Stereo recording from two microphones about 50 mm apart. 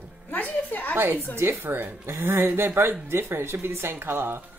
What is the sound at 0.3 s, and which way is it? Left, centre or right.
Music, left.